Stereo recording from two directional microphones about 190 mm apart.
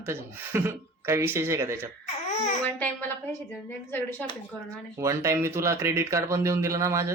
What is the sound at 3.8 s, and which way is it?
Speech, 10° left (ahead or behind).